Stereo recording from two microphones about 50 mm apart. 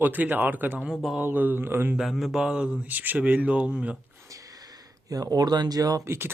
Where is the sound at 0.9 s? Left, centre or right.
Centre.